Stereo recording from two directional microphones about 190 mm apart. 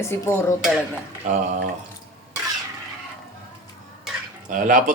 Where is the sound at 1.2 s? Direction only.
40° right (ahead or behind).